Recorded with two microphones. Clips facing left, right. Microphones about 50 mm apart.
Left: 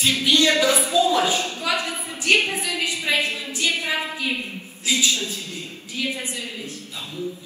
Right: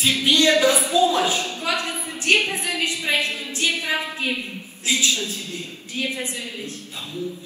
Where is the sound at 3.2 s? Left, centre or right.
Left.